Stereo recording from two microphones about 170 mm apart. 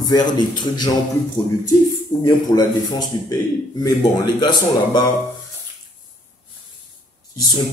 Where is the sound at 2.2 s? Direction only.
20° left (ahead or behind).